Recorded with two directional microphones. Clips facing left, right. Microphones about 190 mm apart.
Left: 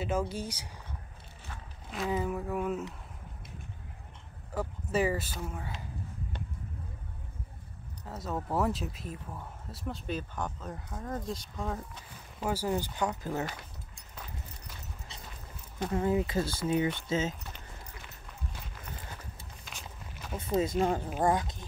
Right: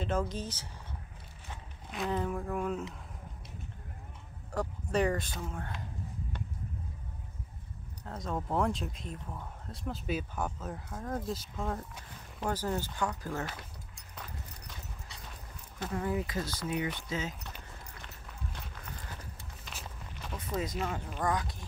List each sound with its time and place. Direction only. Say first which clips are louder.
0.0 s speech: left 1 dB; 10° left (ahead or behind)
1.9 s speech: left 1 dB; 5° left (ahead or behind)
4.5 s speech: even; 5° left (ahead or behind)
8.0 s speech: even; 5° left (ahead or behind)
16.0 s speech: left 5 dB; 25° left (ahead or behind)
18.0 s run: even; 5° left (ahead or behind)
19.6 s walk: right 1 dB; centre (ahead or behind)
20.3 s speech: left 7 dB; 25° left (ahead or behind)
21.2 s speech: left 4 dB; 25° left (ahead or behind)